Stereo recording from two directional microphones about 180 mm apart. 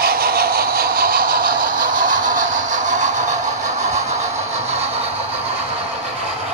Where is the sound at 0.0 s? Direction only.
55° right (ahead or behind); by 4.2 s 40° right (ahead or behind).